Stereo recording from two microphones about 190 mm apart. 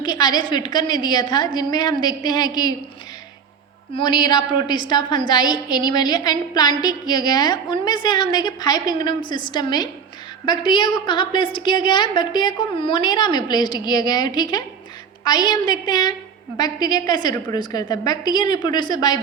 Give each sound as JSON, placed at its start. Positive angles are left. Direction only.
{"t": 0.0, "sound": "a woman's voice", "side_deg": 20}
{"t": 3.9, "sound": "a woman's voice", "side_deg": 25}